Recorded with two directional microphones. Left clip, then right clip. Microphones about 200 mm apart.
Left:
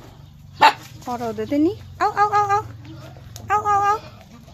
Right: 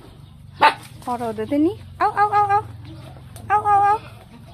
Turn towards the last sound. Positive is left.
turn(degrees=5)  # may be behind; listen again after turning